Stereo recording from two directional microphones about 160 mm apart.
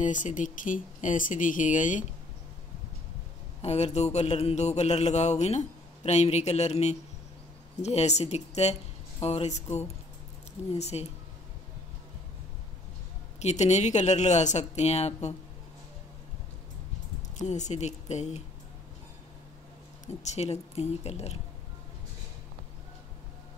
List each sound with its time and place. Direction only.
0.0 s speech: 55° left (ahead or behind)
3.6 s speech: 45° left (ahead or behind)
13.4 s speech: 45° left (ahead or behind)
17.4 s speech: 45° left (ahead or behind)
20.1 s a woman's voice: 45° left (ahead or behind)